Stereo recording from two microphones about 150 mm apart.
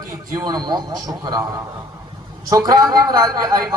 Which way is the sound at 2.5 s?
25° right (ahead or behind).